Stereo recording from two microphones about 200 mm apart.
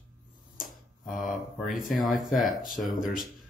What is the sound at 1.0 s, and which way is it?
Speech, centre (ahead or behind).